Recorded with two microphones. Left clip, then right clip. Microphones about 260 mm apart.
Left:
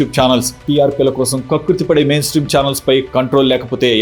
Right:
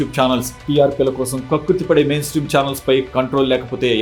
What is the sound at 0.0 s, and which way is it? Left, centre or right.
Speech, left.